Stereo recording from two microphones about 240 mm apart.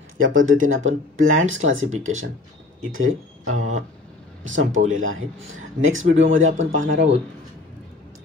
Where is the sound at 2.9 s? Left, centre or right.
Right.